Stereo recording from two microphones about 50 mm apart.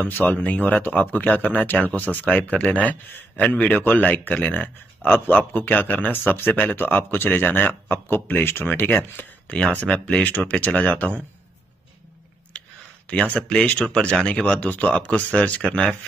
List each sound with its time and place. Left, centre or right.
0.0 s speech: left
9.5 s speech: left
12.5 s a sound: left
13.4 s speech: centre